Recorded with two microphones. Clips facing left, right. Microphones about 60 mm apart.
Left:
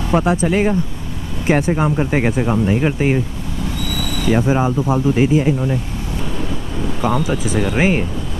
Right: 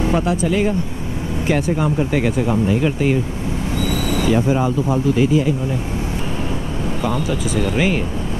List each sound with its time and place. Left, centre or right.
0.1 s speech: left
3.8 s vehicle: right
4.4 s speech: centre
5.1 s speech: left
7.2 s speech: left